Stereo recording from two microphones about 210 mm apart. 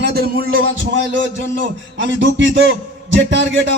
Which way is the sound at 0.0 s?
50° right (ahead or behind).